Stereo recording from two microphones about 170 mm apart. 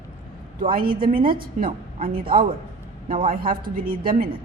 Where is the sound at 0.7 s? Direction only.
55° right (ahead or behind).